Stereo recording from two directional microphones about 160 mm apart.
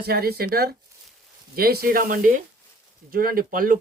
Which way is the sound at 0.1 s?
75° right (ahead or behind).